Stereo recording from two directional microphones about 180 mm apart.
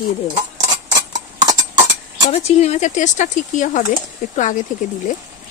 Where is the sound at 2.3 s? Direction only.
35° left (ahead or behind).